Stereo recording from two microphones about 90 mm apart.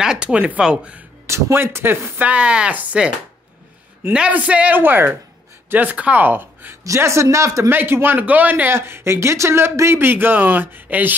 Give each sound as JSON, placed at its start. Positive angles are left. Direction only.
{"t": 0.0, "sound": "speech", "side_deg": -10}
{"t": 1.2, "sound": "a man's voice", "side_deg": -30}
{"t": 4.1, "sound": "speech", "side_deg": -15}
{"t": 6.8, "sound": "speech", "side_deg": -35}
{"t": 7.7, "sound": "a man's voice", "side_deg": -25}